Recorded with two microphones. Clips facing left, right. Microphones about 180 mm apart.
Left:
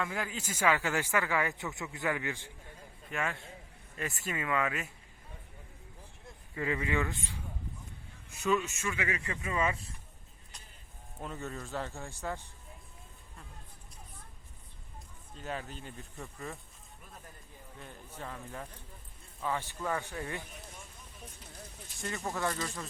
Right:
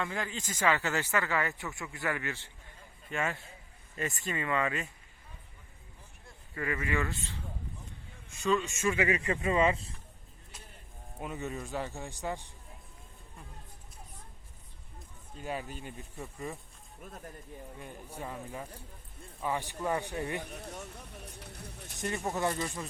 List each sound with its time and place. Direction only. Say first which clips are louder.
0.0 s speech: even; 5° left (ahead or behind)
3.1 s speech: right 2 dB; centre (ahead or behind)
6.2 s speech: left 1 dB; 20° left (ahead or behind)
8.8 s speech: right 6 dB; 30° right (ahead or behind)
11.2 s a man's voice: right 3 dB; 15° right (ahead or behind)
15.4 s a man's voice: right 2 dB; 10° right (ahead or behind)
17.7 s a man's voice: right 1 dB; 10° right (ahead or behind)
20.4 s a sound: right 7 dB; 65° right (ahead or behind)
22.1 s speech: right 2 dB; 20° right (ahead or behind)